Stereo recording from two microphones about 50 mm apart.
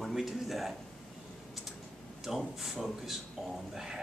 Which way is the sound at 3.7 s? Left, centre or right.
Centre.